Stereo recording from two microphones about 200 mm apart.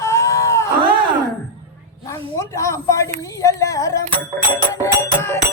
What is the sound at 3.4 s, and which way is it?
Carnatic music, 15° left (ahead or behind).